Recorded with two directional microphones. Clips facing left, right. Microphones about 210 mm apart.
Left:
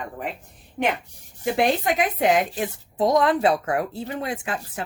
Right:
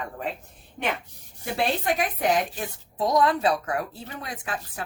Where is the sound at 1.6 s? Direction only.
20° left (ahead or behind).